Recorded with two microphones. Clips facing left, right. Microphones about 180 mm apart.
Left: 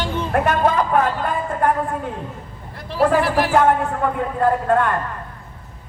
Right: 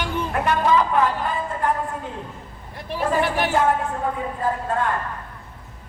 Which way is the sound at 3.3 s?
80° left.